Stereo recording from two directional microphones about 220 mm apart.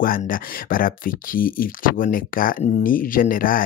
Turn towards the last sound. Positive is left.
turn(degrees=40)  # may be behind; listen again after turning